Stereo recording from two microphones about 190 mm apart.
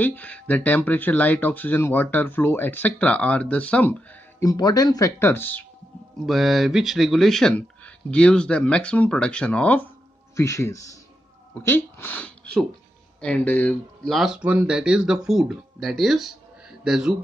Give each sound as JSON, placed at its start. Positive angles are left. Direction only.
{"t": 0.0, "sound": "speech", "side_deg": 10}